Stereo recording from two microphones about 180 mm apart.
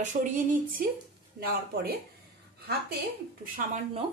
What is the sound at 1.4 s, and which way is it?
Speech, 60° right (ahead or behind).